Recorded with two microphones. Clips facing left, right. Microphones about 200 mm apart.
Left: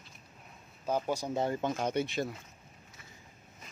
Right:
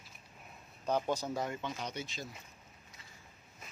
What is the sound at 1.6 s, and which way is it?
Speech, 50° left (ahead or behind).